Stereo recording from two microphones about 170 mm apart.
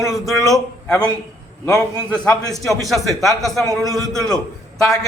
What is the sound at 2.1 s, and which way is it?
A man's voice, 5° left (ahead or behind).